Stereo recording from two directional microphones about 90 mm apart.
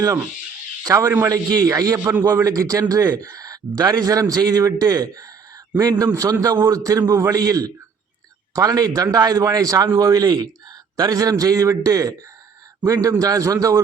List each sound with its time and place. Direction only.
0.9 s a man's voice: 30° right (ahead or behind)
1.3 s a man's voice: 40° right (ahead or behind)